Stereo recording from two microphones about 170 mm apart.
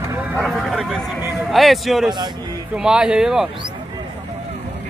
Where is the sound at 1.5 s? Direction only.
Centre (ahead or behind).